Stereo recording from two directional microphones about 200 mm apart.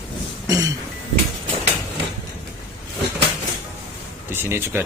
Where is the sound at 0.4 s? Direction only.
15° right (ahead or behind).